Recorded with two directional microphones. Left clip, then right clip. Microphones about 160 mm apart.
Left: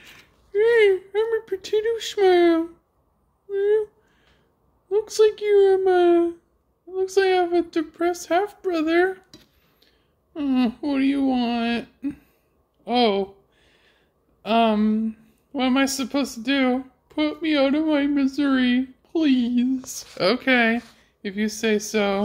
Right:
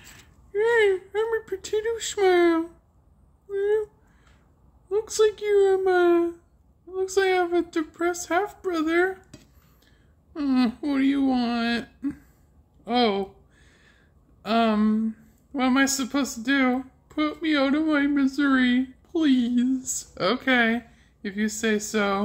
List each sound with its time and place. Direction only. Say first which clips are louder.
0.0 s a sound: left 2 dB; centre (ahead or behind)
3.4 s speech: left 3 dB; 5° left (ahead or behind)
4.8 s a woman's voice: left 3 dB; centre (ahead or behind)
10.4 s a woman's voice: left 1 dB; 5° right (ahead or behind)
12.8 s a woman's voice: left 3 dB; centre (ahead or behind)
14.4 s a woman's voice: left 3 dB; 5° left (ahead or behind)
19.8 s speech: right 2 dB; 25° right (ahead or behind)
20.2 s a woman's voice: left 3 dB; 15° left (ahead or behind)